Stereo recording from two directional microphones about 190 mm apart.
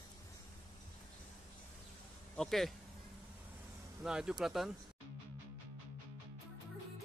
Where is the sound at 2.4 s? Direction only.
Centre (ahead or behind).